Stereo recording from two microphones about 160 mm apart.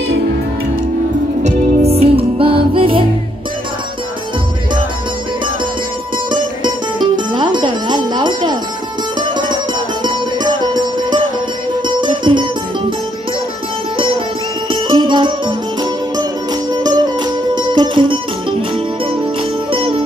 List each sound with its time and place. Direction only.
1.4 s music: 40° right (ahead or behind)
6.3 s music: 30° right (ahead or behind)
10.0 s music: 25° right (ahead or behind)
14.7 s music: 30° right (ahead or behind)
19.7 s music: 35° right (ahead or behind)